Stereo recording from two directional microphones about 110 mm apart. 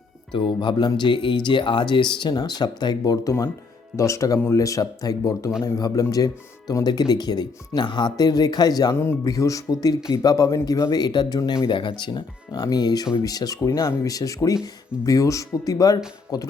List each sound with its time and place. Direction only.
0.3 s speech: 45° left (ahead or behind)